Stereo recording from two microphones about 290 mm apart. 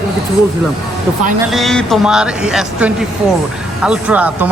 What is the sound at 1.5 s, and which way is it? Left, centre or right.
Speech, centre.